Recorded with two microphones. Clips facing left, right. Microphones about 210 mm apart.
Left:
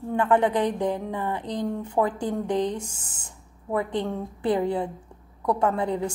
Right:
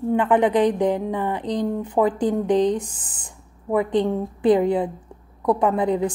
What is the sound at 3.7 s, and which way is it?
A woman's voice, 15° right (ahead or behind).